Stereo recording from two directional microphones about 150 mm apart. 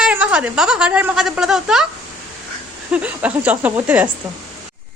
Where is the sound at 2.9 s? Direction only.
10° right (ahead or behind).